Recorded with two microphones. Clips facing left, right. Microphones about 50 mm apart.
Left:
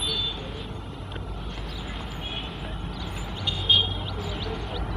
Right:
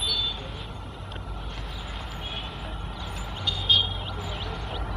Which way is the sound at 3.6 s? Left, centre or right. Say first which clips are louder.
Left 1 dB; centre.